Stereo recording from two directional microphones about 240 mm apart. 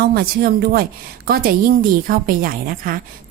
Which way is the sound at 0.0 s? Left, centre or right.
Right.